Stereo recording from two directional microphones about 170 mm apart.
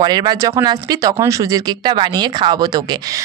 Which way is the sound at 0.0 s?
25° right (ahead or behind).